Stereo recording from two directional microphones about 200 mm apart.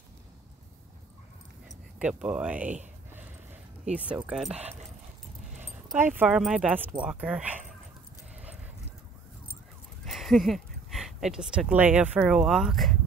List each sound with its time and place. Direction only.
2.0 s speech: 5° right (ahead or behind)
4.3 s speech: centre (ahead or behind)
4.6 s speech: 30° right (ahead or behind)
5.6 s speech: 10° right (ahead or behind)
10.0 s speech: centre (ahead or behind)